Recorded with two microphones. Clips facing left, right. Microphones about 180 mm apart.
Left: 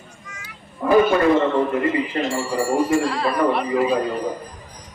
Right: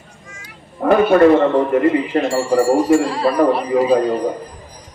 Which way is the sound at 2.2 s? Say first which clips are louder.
Right 7 dB; 50° right (ahead or behind).